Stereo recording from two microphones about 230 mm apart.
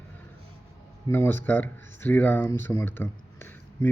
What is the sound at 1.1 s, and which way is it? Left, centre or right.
Speech, centre.